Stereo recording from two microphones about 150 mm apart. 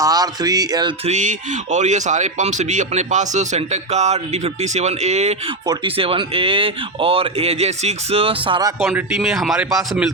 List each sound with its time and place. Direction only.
0.0 s speech: 25° right (ahead or behind)
1.0 s speech: 55° right (ahead or behind)
5.6 s speech: 35° right (ahead or behind)
8.8 s speech: 5° right (ahead or behind)